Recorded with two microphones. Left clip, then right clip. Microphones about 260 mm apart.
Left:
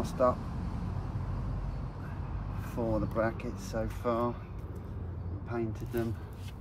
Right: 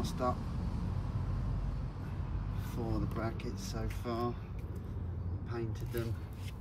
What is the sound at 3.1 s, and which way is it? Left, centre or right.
Speech, centre.